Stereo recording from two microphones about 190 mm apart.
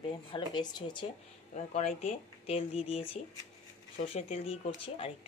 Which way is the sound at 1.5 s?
35° left (ahead or behind).